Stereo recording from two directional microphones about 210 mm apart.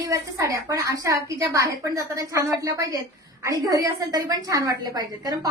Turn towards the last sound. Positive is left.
turn(degrees=-20)  # may be behind; listen again after turning